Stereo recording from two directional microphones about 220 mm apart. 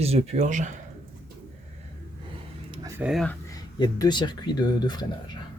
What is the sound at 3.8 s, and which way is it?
Speech, 20° left (ahead or behind).